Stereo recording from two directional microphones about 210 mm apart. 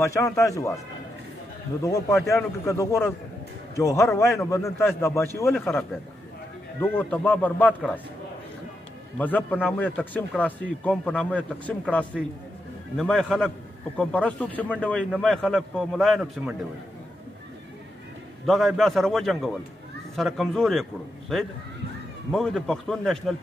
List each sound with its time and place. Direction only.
0.0 s a man's voice: 15° left (ahead or behind)
1.8 s a man's voice: 15° left (ahead or behind)
9.2 s a man's voice: 10° left (ahead or behind)
18.4 s a man's voice: centre (ahead or behind)
22.3 s a man's voice: centre (ahead or behind)